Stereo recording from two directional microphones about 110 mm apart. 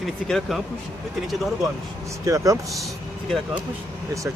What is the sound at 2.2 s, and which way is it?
Speech, 30° right (ahead or behind).